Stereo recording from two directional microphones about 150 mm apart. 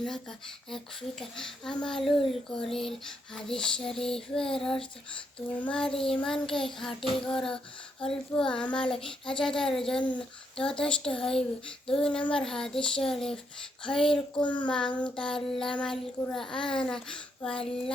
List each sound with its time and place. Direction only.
0.0 s child singing: 5° left (ahead or behind)
5.9 s child singing: 40° left (ahead or behind)
6.2 s child singing: 5° left (ahead or behind)